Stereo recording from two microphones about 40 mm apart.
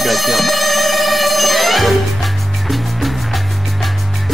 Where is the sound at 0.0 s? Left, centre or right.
Centre.